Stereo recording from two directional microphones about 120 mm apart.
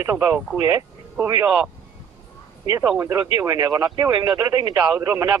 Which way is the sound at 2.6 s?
45° left (ahead or behind).